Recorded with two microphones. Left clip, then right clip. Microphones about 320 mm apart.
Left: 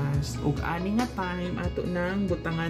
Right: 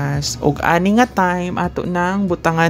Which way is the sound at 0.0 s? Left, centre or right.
Right.